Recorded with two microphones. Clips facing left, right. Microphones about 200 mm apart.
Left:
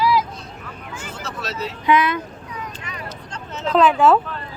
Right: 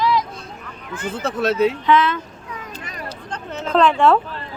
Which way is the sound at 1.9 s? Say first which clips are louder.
Right 1 dB; 10° left (ahead or behind).